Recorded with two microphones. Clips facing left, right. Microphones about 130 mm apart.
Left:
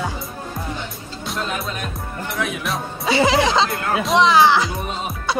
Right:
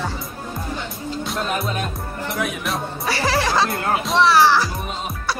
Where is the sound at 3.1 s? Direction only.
20° left (ahead or behind).